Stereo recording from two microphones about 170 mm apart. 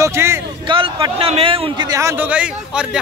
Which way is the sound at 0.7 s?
30° right (ahead or behind).